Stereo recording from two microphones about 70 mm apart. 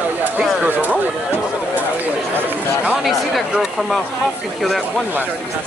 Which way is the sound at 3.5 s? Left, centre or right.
Centre.